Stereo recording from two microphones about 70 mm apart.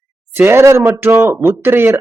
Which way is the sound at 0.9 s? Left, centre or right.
Right.